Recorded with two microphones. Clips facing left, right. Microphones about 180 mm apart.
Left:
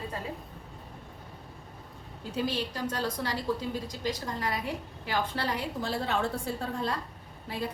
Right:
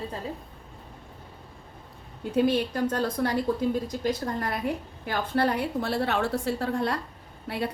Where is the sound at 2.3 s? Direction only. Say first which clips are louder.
Right 8 dB; 60° right (ahead or behind).